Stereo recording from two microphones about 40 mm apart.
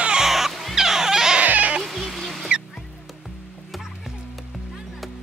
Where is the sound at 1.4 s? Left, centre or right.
Right.